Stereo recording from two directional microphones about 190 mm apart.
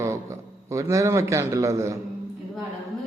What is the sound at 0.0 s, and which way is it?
A man's voice, 15° right (ahead or behind).